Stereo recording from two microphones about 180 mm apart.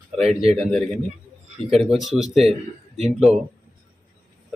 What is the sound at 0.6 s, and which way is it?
Speech, centre (ahead or behind).